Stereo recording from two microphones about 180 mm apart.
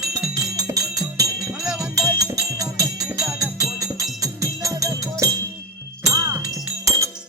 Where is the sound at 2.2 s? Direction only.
20° right (ahead or behind).